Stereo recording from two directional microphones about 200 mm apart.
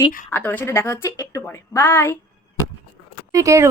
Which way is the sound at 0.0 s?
10° left (ahead or behind).